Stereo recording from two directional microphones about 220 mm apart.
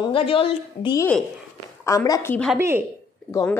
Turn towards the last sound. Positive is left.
turn(degrees=15)  # may be behind; listen again after turning